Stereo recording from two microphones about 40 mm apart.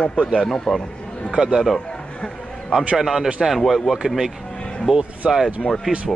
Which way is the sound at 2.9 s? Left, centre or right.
Centre.